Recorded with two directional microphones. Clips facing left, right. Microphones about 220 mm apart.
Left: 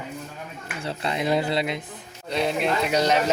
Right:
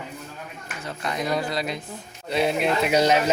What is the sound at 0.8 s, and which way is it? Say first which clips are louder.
Speech: left 2 dB; 30° left (ahead or behind).